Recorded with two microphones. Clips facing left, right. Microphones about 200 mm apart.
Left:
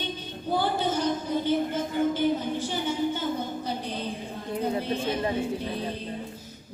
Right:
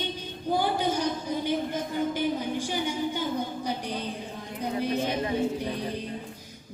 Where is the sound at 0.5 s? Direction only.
15° right (ahead or behind).